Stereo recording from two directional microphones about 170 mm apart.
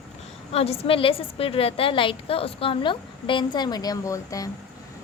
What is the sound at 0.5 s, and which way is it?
A woman's voice, 35° left (ahead or behind).